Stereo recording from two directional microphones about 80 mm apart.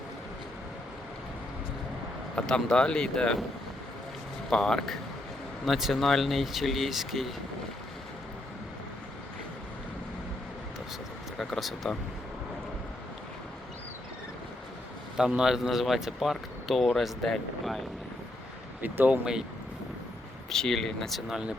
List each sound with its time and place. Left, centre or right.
2.3 s speech: centre
4.4 s speech: centre
11.3 s speech: centre
15.2 s speech: centre
18.8 s speech: right
19.2 s speech: centre
20.5 s speech: centre
21.2 s speech: centre